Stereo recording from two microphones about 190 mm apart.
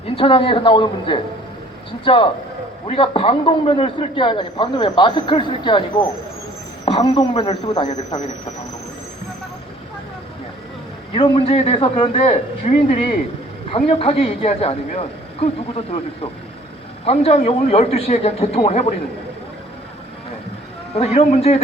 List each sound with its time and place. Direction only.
0.2 s a man's voice: 30° left (ahead or behind)
11.1 s a man's voice: 25° left (ahead or behind)
17.1 s a man's voice: 35° left (ahead or behind)
21.0 s a man's voice: 35° left (ahead or behind)